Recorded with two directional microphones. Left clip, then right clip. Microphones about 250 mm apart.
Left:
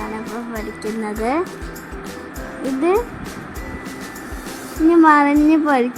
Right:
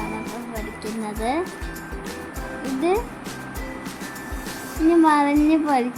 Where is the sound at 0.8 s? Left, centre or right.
Centre.